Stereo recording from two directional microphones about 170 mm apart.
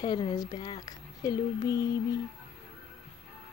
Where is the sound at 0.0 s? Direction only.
25° left (ahead or behind).